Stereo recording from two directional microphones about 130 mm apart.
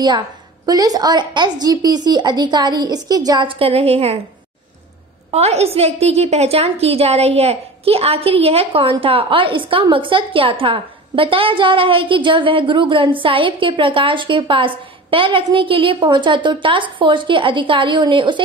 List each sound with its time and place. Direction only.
0.7 s a woman's voice: 30° right (ahead or behind); by 4.2 s 50° right (ahead or behind)
5.3 s a woman's voice: 55° right (ahead or behind); by 18.4 s 40° right (ahead or behind)